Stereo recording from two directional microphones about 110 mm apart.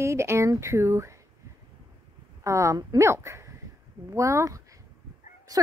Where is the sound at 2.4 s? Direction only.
25° right (ahead or behind).